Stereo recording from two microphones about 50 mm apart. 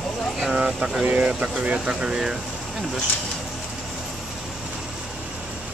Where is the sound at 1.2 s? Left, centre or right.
Right.